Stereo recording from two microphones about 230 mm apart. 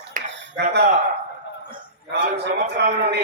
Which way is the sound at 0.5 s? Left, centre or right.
Right.